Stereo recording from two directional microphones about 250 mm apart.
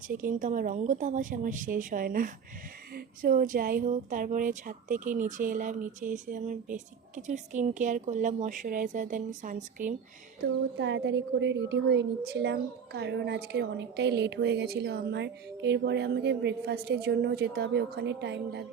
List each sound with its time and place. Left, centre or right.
0.1 s a woman's voice: right
10.8 s a woman's voice: right